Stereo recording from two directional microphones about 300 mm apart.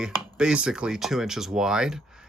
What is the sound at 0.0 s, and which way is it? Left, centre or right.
Speech, centre.